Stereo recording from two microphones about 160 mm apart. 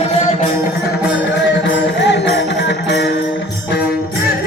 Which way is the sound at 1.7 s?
90° left.